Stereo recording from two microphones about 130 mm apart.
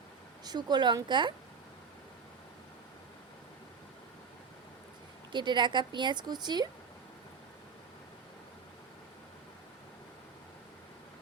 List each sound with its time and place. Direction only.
0.4 s speech: 35° right (ahead or behind)
5.3 s speech: 35° right (ahead or behind)